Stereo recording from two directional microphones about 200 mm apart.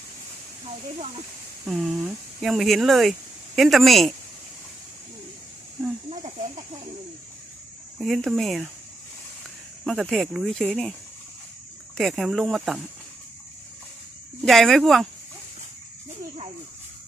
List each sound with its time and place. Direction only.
1.6 s speech: centre (ahead or behind)
6.1 s speech: 35° right (ahead or behind)
7.9 s speech: centre (ahead or behind)
9.8 s speech: centre (ahead or behind)
11.9 s speech: centre (ahead or behind)
14.4 s speech: centre (ahead or behind)